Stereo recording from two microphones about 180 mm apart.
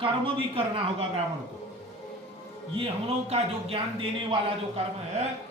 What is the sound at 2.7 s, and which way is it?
Speech, 30° right (ahead or behind).